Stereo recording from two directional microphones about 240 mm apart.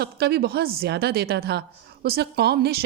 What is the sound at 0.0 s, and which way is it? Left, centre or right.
Speech, right.